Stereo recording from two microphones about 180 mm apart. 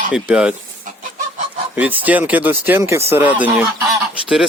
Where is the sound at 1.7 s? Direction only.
10° right (ahead or behind).